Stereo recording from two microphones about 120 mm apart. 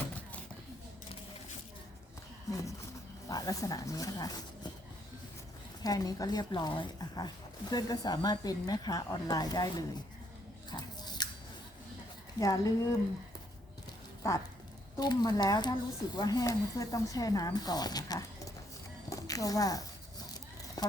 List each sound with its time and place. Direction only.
2.5 s speech: 25° left (ahead or behind)
5.8 s speech: 30° left (ahead or behind)
10.7 s biting: 35° left (ahead or behind)
12.4 s a woman's voice: 30° left (ahead or behind)
14.9 s speech: 35° left (ahead or behind)
19.1 s a sound: 30° left (ahead or behind)
20.8 s vehicle: 35° left (ahead or behind)